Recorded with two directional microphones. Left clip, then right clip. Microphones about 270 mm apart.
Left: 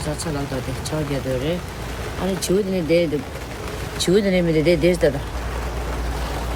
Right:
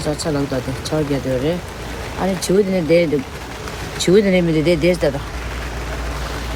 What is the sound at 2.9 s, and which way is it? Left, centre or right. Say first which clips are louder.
Speech: right 3 dB; right.